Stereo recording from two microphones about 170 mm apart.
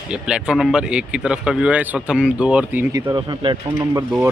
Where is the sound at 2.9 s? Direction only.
25° right (ahead or behind).